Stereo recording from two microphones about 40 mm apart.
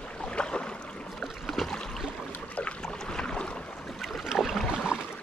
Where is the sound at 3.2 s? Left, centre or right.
Left.